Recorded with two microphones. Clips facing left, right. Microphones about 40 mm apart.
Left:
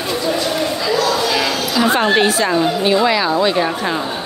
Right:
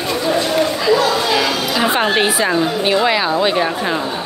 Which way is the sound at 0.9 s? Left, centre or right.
Right.